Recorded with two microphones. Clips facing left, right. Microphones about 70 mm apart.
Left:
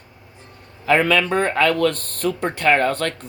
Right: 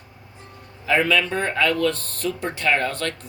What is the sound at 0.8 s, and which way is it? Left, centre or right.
Speech, left.